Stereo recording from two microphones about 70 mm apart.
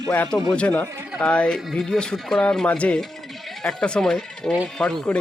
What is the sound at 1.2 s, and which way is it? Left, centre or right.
Speech, centre.